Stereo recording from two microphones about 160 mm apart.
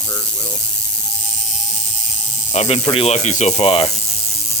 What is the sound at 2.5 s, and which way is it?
Speech, 40° left (ahead or behind).